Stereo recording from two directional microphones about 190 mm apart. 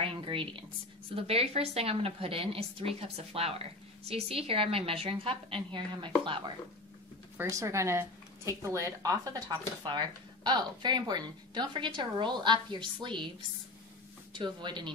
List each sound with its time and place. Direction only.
0.0 s a sound: 30° right (ahead or behind)
1.1 s a woman's voice: 30° right (ahead or behind)
7.3 s speech: 15° right (ahead or behind)
14.3 s speech: 25° right (ahead or behind)